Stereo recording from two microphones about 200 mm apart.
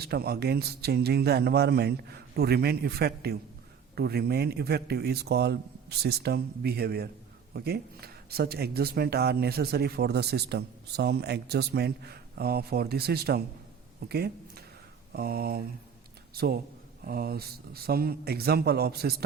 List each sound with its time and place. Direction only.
0.0 s a man's voice: 50° right (ahead or behind)